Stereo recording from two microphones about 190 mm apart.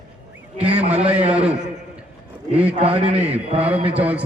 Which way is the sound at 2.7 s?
30° right (ahead or behind).